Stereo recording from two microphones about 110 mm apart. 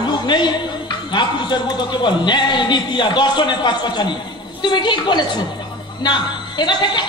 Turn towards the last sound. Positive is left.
turn(degrees=45)  # may be behind; listen again after turning